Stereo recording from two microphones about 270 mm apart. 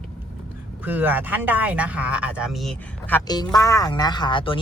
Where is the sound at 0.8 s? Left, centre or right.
Centre.